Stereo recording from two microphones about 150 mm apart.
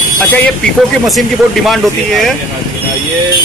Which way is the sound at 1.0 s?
Centre (ahead or behind).